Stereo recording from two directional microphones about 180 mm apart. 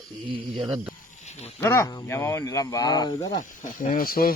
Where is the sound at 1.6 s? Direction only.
15° left (ahead or behind).